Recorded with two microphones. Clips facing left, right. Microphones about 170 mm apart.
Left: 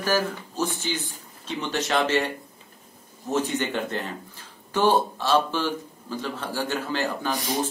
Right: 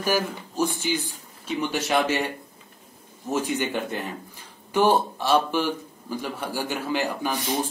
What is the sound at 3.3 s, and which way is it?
A man's voice, 10° right (ahead or behind).